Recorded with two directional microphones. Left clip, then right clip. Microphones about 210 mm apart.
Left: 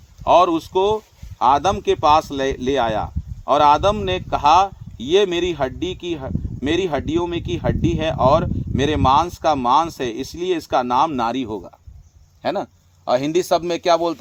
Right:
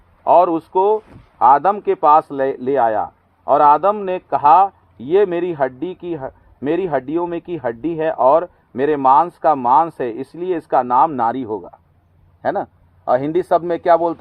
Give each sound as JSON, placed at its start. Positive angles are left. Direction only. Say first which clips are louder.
{"t": 0.3, "sound": "a man's voice", "louder": "right 2 dB", "side_deg": 20}